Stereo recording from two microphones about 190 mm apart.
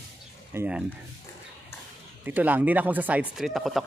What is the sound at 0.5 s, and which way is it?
Speech, 10° right (ahead or behind).